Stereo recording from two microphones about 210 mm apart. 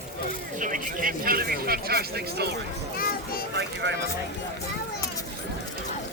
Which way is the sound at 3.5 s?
55° right (ahead or behind).